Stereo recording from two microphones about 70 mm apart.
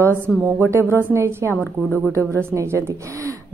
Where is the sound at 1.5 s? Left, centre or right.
Left.